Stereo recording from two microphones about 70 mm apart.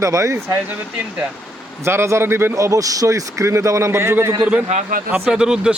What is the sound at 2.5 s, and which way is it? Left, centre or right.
A man's voice, right.